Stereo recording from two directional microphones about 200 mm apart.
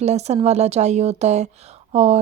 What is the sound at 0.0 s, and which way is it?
A woman's voice, 35° right (ahead or behind).